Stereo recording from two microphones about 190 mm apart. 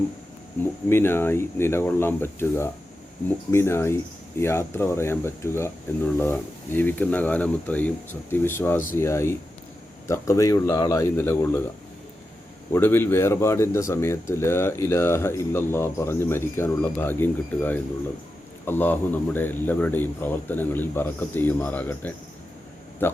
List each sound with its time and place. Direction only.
0.9 s speech: 10° left (ahead or behind)
12.7 s speech: 10° left (ahead or behind)